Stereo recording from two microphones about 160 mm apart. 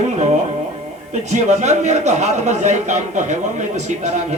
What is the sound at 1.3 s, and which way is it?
A man's voice, 45° right (ahead or behind).